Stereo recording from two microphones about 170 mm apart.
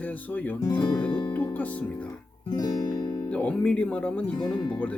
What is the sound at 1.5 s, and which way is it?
Speech, 10° left (ahead or behind).